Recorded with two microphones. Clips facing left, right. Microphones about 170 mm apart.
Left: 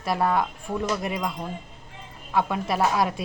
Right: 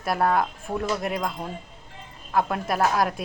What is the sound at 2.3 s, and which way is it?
Speech, centre (ahead or behind).